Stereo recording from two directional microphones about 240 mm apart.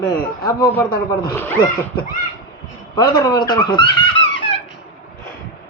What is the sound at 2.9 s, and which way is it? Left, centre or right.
Speech, centre.